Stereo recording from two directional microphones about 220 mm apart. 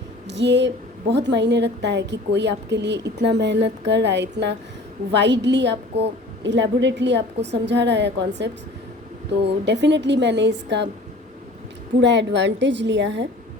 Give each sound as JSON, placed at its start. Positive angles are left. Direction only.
{"t": 0.3, "sound": "a woman's voice", "side_deg": -50}
{"t": 11.9, "sound": "a woman's voice", "side_deg": -55}